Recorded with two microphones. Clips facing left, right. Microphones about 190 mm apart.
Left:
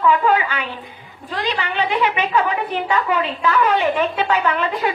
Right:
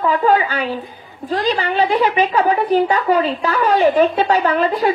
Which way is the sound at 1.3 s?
35° right (ahead or behind).